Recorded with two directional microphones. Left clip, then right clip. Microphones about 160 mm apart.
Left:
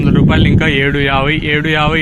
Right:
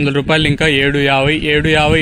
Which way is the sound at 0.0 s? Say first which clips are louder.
Even; 60° right (ahead or behind).